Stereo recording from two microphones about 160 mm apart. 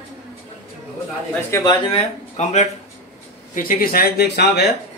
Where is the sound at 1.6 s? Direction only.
30° left (ahead or behind).